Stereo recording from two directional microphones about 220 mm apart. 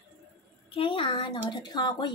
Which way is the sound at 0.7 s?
25° left (ahead or behind).